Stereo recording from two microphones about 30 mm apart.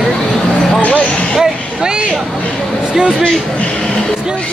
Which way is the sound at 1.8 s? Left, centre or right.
Right.